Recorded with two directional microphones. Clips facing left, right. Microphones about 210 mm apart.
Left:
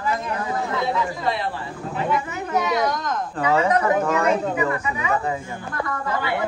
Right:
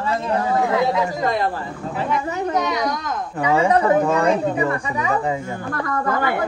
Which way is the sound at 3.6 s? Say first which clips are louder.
Right 3 dB; 30° right (ahead or behind).